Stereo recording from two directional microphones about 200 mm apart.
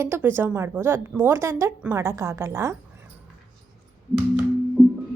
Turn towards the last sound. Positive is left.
turn(degrees=-5)  # may be behind; listen again after turning